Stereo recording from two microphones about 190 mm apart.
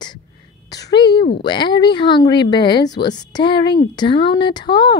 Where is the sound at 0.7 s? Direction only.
20° left (ahead or behind).